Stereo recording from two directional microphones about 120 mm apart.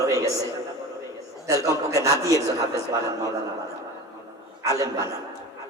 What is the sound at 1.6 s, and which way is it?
Speech, 25° right (ahead or behind).